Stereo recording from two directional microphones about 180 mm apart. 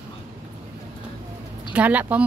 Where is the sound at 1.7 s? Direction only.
10° right (ahead or behind).